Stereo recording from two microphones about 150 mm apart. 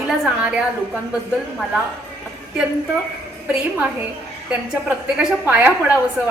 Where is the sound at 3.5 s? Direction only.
10° right (ahead or behind).